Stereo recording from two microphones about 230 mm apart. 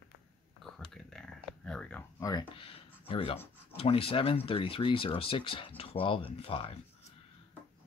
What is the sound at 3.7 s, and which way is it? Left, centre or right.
Speech, left.